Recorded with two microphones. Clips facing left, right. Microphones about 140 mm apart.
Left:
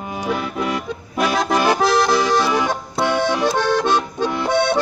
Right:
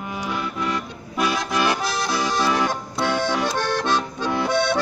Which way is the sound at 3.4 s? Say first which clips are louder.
Left 5 dB; 50° left (ahead or behind).